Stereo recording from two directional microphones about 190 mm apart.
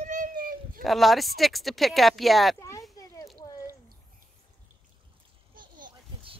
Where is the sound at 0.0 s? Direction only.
40° right (ahead or behind).